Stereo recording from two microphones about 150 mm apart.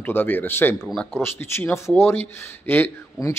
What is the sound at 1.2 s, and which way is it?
Speech, 15° left (ahead or behind).